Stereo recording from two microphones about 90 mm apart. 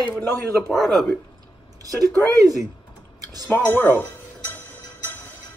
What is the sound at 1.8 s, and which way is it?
Speech, 40° right (ahead or behind).